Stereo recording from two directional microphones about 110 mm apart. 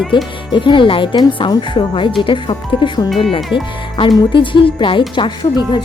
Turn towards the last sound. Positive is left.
turn(degrees=40)  # may be behind; listen again after turning